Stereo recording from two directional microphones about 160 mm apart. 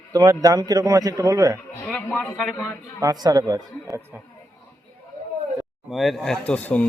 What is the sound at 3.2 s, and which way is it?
Speech, 25° right (ahead or behind).